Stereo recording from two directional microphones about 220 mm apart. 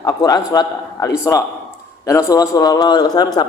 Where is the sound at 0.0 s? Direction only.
15° left (ahead or behind).